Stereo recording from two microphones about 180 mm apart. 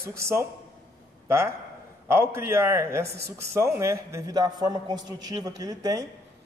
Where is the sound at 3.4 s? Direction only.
15° right (ahead or behind).